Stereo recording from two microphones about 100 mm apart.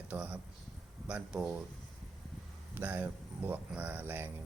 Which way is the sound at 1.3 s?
5° right (ahead or behind).